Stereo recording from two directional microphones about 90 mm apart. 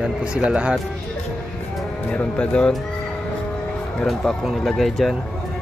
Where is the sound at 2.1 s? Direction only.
15° left (ahead or behind).